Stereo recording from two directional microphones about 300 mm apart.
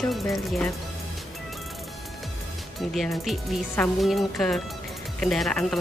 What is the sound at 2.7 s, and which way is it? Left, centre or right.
Speech, centre.